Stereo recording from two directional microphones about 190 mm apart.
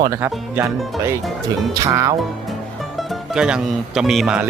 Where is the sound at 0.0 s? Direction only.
15° right (ahead or behind).